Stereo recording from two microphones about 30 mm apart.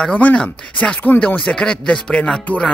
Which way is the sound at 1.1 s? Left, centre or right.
Left.